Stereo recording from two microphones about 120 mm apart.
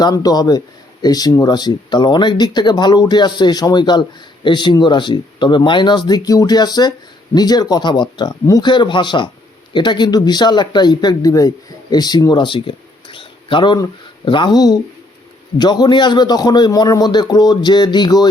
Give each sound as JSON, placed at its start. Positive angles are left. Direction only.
{"t": 0.0, "sound": "speech", "side_deg": 35}